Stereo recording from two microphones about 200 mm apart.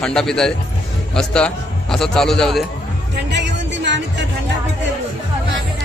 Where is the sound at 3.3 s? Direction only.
60° right (ahead or behind).